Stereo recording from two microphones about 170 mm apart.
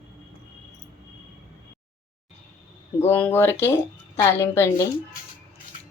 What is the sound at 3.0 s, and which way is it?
Speech, 10° left (ahead or behind).